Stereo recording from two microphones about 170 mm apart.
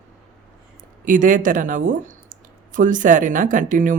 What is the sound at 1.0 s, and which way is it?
Speech, 50° right (ahead or behind).